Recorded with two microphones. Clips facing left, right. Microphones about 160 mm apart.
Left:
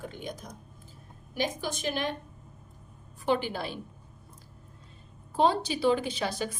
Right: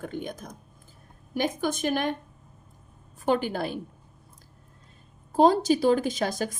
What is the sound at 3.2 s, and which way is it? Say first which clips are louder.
Speech: right 3 dB; 45° right (ahead or behind).